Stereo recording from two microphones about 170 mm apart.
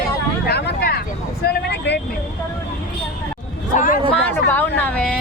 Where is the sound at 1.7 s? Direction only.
85° left.